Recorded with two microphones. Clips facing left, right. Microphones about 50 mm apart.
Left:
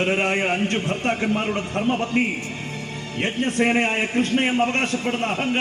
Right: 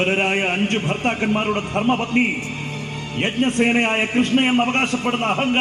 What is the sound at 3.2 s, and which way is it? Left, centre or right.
A man's voice, right.